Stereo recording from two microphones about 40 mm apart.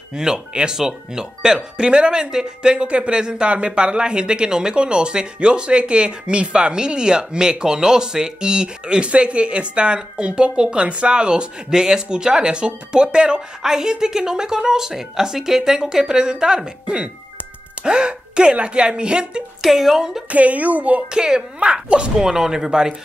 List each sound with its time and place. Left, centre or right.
0.1 s speech: centre
13.6 s a woman's voice: centre
19.6 s a woman's voice: centre
20.0 s a woman's voice: centre
20.2 s a woman's voice: right
21.1 s speech: centre
22.2 s a woman's voice: centre